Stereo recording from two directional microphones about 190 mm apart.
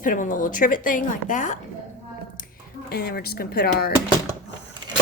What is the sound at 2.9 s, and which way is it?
Speech, 55° left (ahead or behind).